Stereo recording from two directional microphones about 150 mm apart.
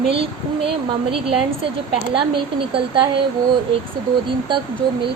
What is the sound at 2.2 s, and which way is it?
Speech, 35° right (ahead or behind).